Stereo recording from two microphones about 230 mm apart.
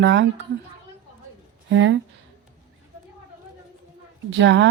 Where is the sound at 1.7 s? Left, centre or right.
Right.